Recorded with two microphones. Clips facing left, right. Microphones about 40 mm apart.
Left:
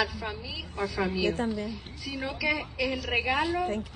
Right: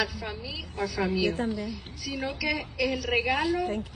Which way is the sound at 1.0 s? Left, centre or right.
Right.